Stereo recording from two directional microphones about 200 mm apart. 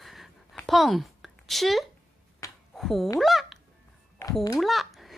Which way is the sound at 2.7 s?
Centre (ahead or behind).